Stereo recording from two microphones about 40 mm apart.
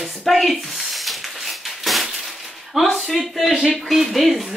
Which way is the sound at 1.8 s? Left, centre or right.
Centre.